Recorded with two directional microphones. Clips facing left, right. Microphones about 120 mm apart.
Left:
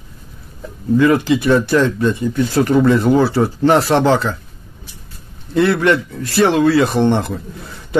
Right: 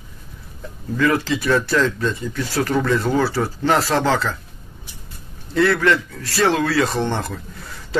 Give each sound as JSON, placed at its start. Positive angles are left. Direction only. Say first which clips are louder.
{"t": 0.9, "sound": "speech", "louder": "left 6 dB", "side_deg": 20}
{"t": 5.5, "sound": "speech", "louder": "left 3 dB", "side_deg": 20}